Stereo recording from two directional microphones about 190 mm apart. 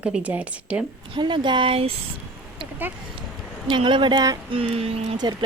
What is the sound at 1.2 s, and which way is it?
Speech, 25° right (ahead or behind).